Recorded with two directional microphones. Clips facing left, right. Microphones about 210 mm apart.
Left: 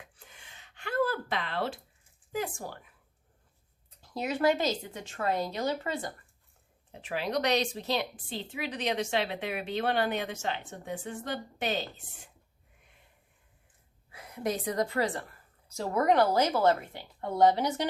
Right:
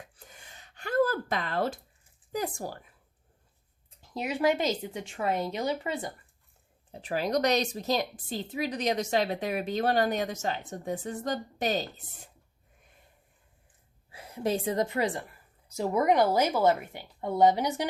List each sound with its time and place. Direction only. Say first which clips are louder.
0.2 s a sound: right 3 dB; 40° right (ahead or behind)
2.3 s a woman's voice: right 2 dB; 40° right (ahead or behind)
4.2 s a woman's voice: even; 10° right (ahead or behind)
6.9 s a woman's voice: right 3 dB; 40° right (ahead or behind)
14.1 s a woman's voice: right 3 dB; 30° right (ahead or behind); by 17.8 s 10° right (ahead or behind)